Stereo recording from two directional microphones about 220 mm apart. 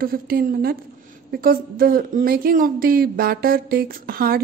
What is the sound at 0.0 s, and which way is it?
A woman's voice, 40° right (ahead or behind).